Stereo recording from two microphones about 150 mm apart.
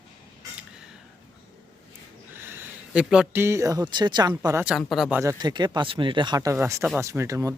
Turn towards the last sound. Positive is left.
turn(degrees=-20)  # may be behind; listen again after turning